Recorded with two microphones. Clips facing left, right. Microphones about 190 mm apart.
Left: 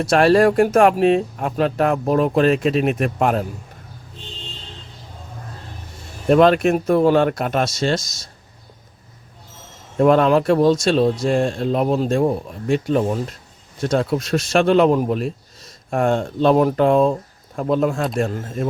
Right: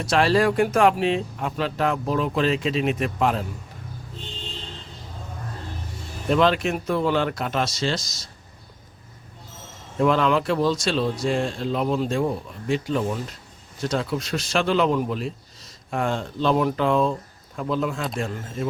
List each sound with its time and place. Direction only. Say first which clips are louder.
0.0 s speech: left 6 dB; 55° left (ahead or behind)
6.2 s speech: left 7 dB; 50° left (ahead or behind)
10.0 s speech: left 6 dB; 45° left (ahead or behind)